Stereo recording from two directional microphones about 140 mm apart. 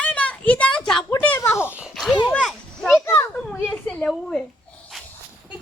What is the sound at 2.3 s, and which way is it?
Children playing, 5° left (ahead or behind).